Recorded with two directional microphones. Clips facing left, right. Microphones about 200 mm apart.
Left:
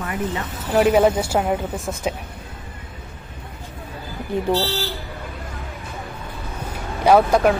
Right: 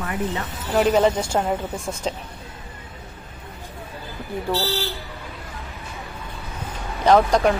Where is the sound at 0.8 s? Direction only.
10° left (ahead or behind).